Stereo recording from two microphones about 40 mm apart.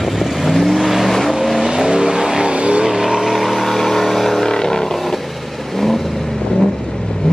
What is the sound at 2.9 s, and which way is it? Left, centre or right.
Vehicle, centre.